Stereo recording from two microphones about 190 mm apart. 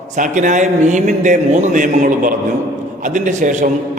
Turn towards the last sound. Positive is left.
turn(degrees=-40)  # may be behind; listen again after turning